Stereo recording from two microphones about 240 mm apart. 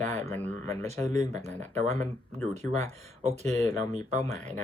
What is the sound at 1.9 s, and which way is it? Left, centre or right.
Speech, centre.